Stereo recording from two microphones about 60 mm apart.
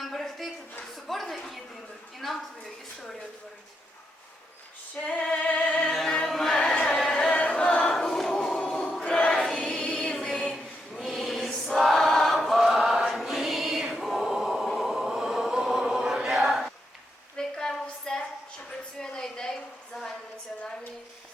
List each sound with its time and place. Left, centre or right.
0.0 s a sound: centre
5.0 s music: centre
5.9 s music: centre
6.6 s music: centre
7.3 s choir: left
8.0 s music: centre
9.0 s choir: centre
9.3 s choir: centre
9.6 s music: centre
10.9 s choir: centre
14.8 s chant: centre
17.3 s a sound: centre